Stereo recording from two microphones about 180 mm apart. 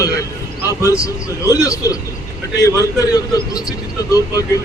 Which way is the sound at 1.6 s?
20° left (ahead or behind).